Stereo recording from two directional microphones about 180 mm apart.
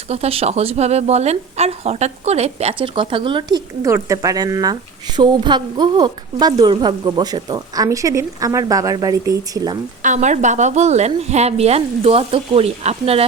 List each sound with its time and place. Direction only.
0.1 s a woman's voice: 35° right (ahead or behind)
3.8 s a woman's voice: 15° right (ahead or behind)
10.0 s a woman's voice: 40° right (ahead or behind)